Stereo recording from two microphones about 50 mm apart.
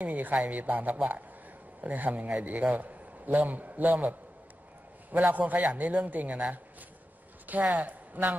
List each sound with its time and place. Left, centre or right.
0.0 s a woman's voice: right
5.1 s a man's voice: right
7.6 s speech: right